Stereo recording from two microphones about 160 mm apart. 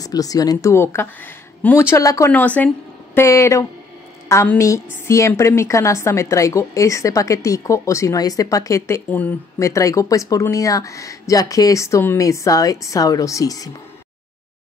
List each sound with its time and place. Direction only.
0.0 s a woman's voice: 20° left (ahead or behind)